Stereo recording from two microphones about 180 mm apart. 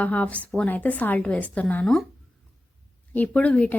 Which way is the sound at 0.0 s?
10° left (ahead or behind).